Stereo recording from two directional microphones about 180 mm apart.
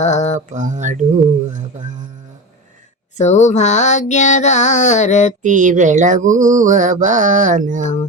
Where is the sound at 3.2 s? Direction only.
40° left (ahead or behind).